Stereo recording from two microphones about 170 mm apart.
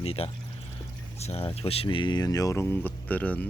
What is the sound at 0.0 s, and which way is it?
Speech, 35° left (ahead or behind).